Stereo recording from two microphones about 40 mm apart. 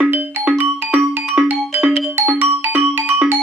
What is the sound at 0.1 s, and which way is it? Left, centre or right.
Music, right.